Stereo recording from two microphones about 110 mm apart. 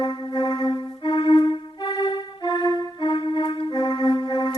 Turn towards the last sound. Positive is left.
turn(degrees=40)  # may be behind; listen again after turning